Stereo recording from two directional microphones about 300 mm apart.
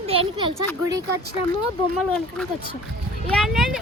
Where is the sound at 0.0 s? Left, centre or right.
Centre.